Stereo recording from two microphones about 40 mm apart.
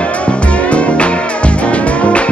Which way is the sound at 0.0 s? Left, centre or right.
Left.